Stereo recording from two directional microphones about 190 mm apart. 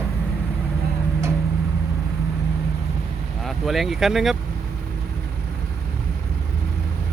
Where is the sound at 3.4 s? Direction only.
Centre (ahead or behind).